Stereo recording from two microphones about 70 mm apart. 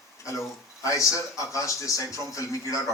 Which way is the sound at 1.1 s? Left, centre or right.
Left.